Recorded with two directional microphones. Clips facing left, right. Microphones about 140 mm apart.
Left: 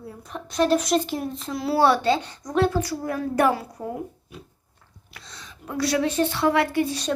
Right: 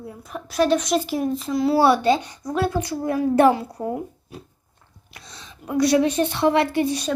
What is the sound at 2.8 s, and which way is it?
A woman's voice, 20° right (ahead or behind).